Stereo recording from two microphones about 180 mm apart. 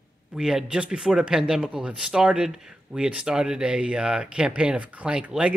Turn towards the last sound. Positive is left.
turn(degrees=-5)  # may be behind; listen again after turning